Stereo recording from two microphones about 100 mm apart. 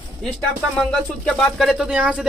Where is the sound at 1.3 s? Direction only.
10° left (ahead or behind).